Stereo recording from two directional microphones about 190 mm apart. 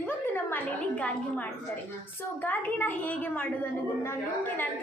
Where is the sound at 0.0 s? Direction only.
10° left (ahead or behind).